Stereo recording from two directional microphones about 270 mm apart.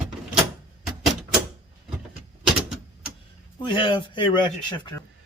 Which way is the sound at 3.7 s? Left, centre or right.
Centre.